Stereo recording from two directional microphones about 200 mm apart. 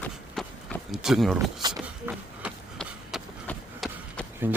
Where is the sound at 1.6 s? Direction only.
20° right (ahead or behind).